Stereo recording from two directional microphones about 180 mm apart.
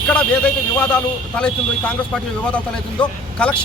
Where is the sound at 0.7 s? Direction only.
5° left (ahead or behind).